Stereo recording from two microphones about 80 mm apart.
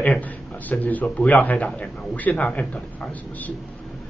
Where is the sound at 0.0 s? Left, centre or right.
Centre.